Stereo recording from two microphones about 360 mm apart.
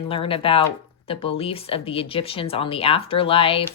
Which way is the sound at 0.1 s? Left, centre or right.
Centre.